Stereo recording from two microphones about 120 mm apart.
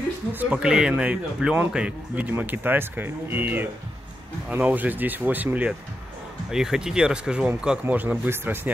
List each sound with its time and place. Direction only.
0.3 s speech: 10° right (ahead or behind)